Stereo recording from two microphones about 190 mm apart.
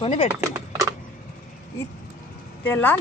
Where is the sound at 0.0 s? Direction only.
30° left (ahead or behind).